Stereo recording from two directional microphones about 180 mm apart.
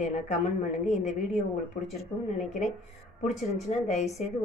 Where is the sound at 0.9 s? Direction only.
40° left (ahead or behind).